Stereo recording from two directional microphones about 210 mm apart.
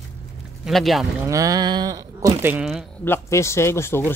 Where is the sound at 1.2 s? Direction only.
15° right (ahead or behind).